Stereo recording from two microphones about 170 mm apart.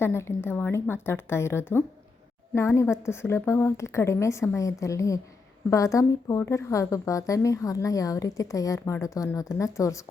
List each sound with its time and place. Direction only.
0.0 s a woman's voice: 15° left (ahead or behind)